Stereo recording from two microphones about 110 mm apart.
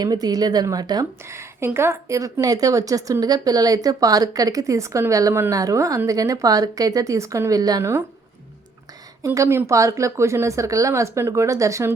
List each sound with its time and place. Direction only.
0.0 s a woman's voice: 35° right (ahead or behind)
1.3 s a woman's voice: 25° right (ahead or behind)
9.2 s speech: 30° right (ahead or behind)